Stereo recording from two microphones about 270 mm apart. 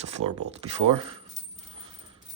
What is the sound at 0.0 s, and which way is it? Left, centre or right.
Speech, right.